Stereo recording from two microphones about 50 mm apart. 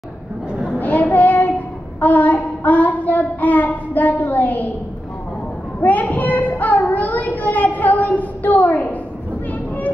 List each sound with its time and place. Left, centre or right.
0.5 s a sound: right
0.7 s child singing: left
5.8 s child singing: left
6.9 s a woman's voice: left